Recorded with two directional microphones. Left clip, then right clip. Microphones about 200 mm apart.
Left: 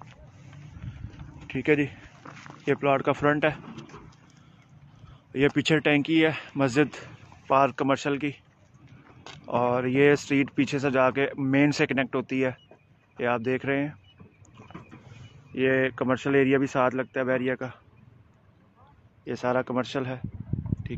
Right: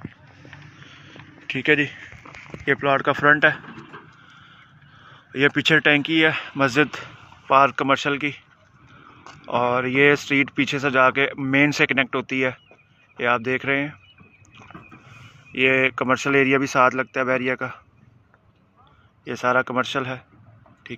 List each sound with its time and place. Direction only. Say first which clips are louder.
1.5 s speech: right 5 dB; centre (ahead or behind)
3.6 s a sound: right 5 dB; 55° left (ahead or behind)
5.3 s speech: right 6 dB; centre (ahead or behind)
9.4 s speech: right 4 dB; centre (ahead or behind)
14.6 s vehicle: right 3 dB; 5° left (ahead or behind)
15.5 s speech: right 6 dB; 5° right (ahead or behind)
19.2 s speech: right 6 dB; centre (ahead or behind)